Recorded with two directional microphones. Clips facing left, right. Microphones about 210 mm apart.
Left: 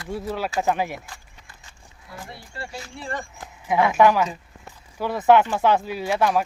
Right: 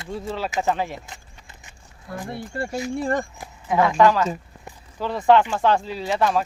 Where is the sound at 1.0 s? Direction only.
20° right (ahead or behind).